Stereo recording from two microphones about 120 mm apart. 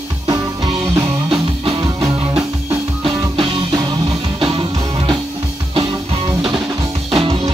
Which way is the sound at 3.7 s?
30° right (ahead or behind).